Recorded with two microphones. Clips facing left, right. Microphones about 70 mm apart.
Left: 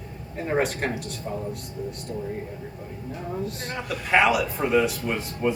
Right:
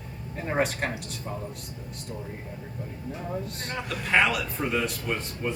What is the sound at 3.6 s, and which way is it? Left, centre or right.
A man's voice, centre.